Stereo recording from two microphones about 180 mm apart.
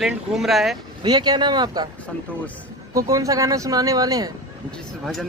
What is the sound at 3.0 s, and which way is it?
Speech, 20° right (ahead or behind).